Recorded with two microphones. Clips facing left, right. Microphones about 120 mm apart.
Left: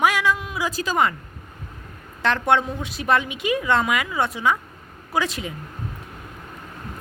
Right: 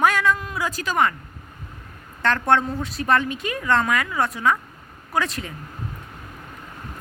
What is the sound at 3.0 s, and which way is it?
A woman's voice, 15° left (ahead or behind).